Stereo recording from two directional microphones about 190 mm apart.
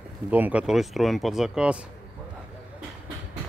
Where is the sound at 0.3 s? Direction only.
10° right (ahead or behind).